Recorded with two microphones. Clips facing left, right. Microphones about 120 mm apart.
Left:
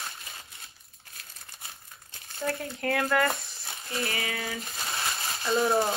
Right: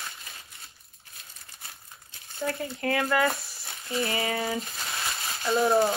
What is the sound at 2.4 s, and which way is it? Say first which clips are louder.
Speech: right 1 dB; centre (ahead or behind).